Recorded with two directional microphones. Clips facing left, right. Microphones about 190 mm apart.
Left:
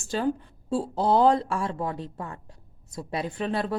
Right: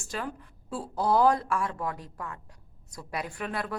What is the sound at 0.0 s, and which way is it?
Speech, 30° left (ahead or behind).